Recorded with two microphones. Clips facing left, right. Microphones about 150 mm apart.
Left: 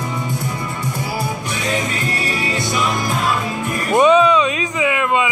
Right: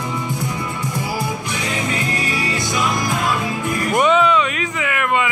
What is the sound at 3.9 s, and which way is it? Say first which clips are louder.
Music: left 4 dB; 20° left (ahead or behind).